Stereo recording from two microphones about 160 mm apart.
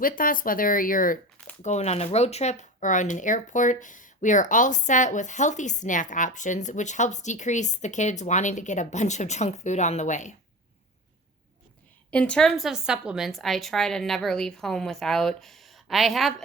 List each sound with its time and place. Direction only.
0.0 s speech: 60° left (ahead or behind)
1.6 s speech: 45° left (ahead or behind)
12.1 s a woman's voice: 5° left (ahead or behind)